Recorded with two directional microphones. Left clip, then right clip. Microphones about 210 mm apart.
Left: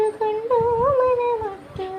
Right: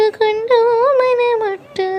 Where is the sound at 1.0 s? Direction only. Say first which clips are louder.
Right 5 dB; 40° right (ahead or behind).